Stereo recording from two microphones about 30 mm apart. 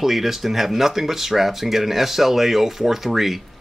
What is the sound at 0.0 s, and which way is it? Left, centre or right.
Speech, centre.